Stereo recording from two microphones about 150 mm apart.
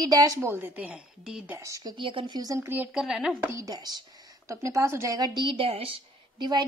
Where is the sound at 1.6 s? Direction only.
25° right (ahead or behind); by 3.4 s centre (ahead or behind).